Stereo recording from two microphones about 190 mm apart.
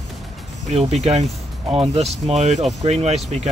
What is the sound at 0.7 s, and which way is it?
Speech, 35° right (ahead or behind).